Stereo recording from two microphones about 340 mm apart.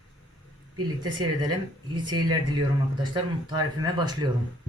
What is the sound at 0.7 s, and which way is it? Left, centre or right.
Speech, centre.